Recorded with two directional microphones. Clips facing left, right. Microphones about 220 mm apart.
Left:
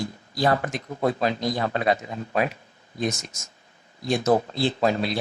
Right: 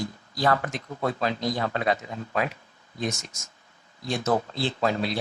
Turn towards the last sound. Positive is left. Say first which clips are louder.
# left 3 dB
turn(degrees=15)  # may be behind; listen again after turning